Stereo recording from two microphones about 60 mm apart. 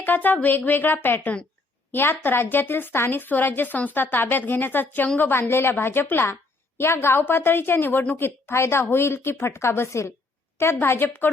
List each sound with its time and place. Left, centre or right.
0.0 s a woman's voice: left
5.4 s a woman's voice: left